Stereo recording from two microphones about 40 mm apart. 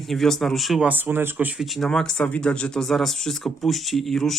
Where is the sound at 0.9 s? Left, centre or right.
Right.